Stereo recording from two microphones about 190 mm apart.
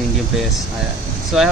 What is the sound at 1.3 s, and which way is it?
Speech, 5° right (ahead or behind).